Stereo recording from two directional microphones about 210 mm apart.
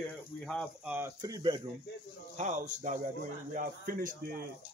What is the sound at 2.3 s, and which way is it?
A man's voice, 35° right (ahead or behind).